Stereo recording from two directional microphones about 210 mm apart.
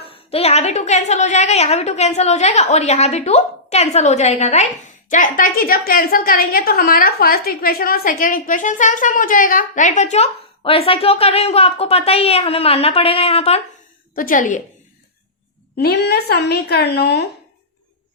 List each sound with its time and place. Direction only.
0.1 s a woman's voice: 30° left (ahead or behind)
14.2 s a woman's voice: 40° left (ahead or behind)
15.7 s a woman's voice: 50° left (ahead or behind)